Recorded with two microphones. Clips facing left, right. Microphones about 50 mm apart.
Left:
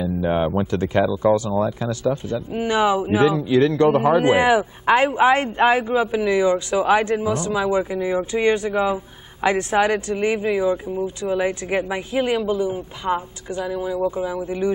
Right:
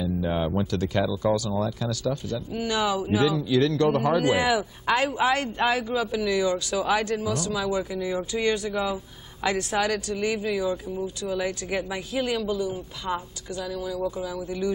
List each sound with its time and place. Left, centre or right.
0.0 s speech: left